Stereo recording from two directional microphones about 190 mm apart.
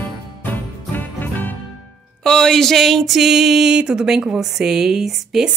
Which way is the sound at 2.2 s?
5° left (ahead or behind).